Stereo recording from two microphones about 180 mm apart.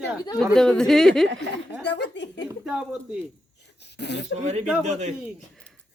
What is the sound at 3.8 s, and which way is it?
Speech, 70° left (ahead or behind).